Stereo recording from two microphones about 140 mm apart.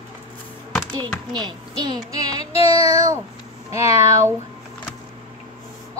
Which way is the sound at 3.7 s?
20° right (ahead or behind).